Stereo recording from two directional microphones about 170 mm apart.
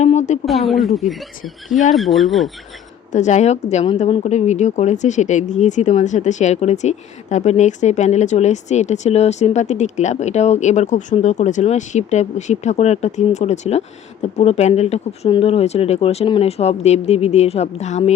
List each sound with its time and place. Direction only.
0.0 s a sound: 45° left (ahead or behind)
1.9 s speech: centre (ahead or behind)
3.1 s a woman's voice: 45° left (ahead or behind)